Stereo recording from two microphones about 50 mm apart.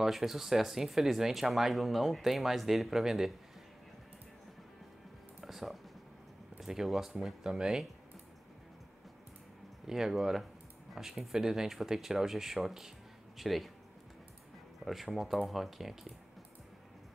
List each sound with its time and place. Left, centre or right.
0.0 s speech: centre
5.4 s a sound: centre
6.6 s speech: centre
9.8 s speech: centre
14.9 s speech: centre